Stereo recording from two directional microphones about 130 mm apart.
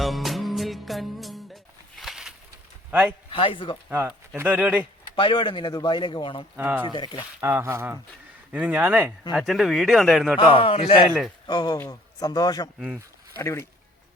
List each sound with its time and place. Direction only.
0.0 s music: centre (ahead or behind)
2.0 s a sound: 5° right (ahead or behind)
2.9 s a man's voice: 10° right (ahead or behind)
3.2 s speech: 45° left (ahead or behind)
3.8 s speech: 15° right (ahead or behind)
5.1 s speech: 40° left (ahead or behind)
6.6 s speech: 15° right (ahead or behind)
6.9 s speech: 35° left (ahead or behind)
7.4 s speech: 20° right (ahead or behind)
9.3 s speech: centre (ahead or behind)
10.5 s a man's voice: 45° left (ahead or behind)
11.4 s a man's voice: 30° left (ahead or behind)